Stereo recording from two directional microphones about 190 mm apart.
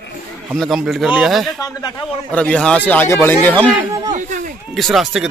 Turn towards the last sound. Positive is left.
turn(degrees=0)  # may be behind; listen again after turning